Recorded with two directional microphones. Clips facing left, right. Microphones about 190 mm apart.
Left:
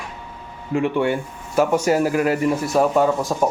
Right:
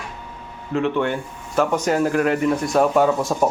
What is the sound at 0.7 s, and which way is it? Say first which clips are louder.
Speech: left 1 dB; 10° left (ahead or behind).